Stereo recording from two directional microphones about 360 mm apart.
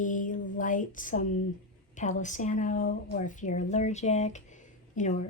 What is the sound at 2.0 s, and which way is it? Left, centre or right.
A woman's voice, centre.